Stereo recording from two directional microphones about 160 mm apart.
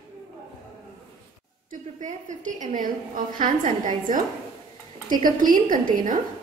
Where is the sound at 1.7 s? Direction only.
50° right (ahead or behind).